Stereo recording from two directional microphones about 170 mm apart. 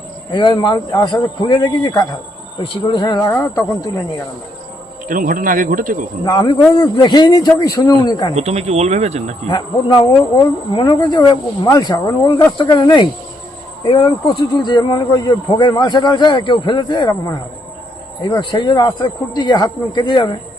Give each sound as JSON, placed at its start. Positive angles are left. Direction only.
{"t": 0.3, "sound": "speech", "side_deg": 25}
{"t": 5.0, "sound": "speech", "side_deg": -55}
{"t": 6.2, "sound": "speech", "side_deg": 25}
{"t": 8.4, "sound": "speech", "side_deg": -40}
{"t": 9.5, "sound": "speech", "side_deg": 25}